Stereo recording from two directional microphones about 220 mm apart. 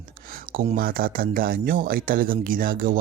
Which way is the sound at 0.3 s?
40° right (ahead or behind).